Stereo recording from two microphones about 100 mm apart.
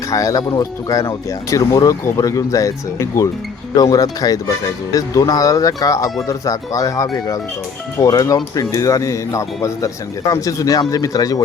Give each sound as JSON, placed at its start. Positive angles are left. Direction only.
{"t": 0.1, "sound": "speech", "side_deg": 35}